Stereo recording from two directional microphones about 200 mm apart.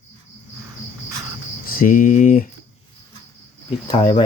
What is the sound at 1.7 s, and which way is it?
Speech, 45° left (ahead or behind).